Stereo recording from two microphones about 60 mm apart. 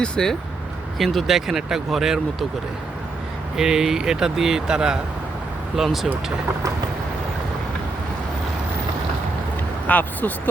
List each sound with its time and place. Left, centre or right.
0.0 s speech: centre
0.9 s speech: centre
3.6 s speech: centre
9.8 s speech: left